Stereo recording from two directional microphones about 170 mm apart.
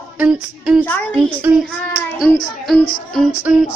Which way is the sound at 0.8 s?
10° left (ahead or behind).